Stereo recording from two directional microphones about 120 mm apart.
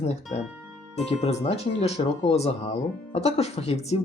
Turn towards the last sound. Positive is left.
turn(degrees=60)  # may be behind; listen again after turning